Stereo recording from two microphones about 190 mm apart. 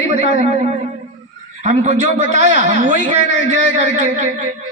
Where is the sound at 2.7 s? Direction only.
75° left (ahead or behind).